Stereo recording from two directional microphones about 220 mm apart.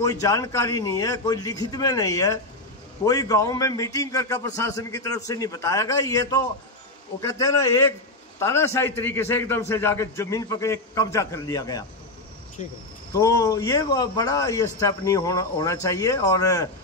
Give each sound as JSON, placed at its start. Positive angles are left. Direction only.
{"t": 0.0, "sound": "a man's voice", "side_deg": 15}
{"t": 13.1, "sound": "a man's voice", "side_deg": 15}